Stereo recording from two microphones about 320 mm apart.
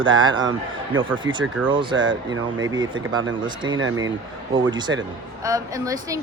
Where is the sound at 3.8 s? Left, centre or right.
Right.